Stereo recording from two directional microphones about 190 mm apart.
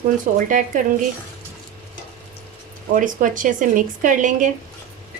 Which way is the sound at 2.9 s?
45° right (ahead or behind).